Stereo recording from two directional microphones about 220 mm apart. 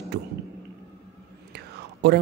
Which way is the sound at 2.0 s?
50° right (ahead or behind).